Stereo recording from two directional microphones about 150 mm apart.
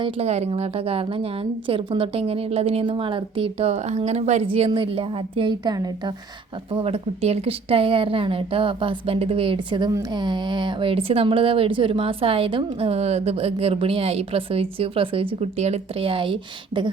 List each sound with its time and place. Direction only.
0.0 s speech: 45° right (ahead or behind); by 5.9 s 25° right (ahead or behind)
6.7 s speech: 40° right (ahead or behind)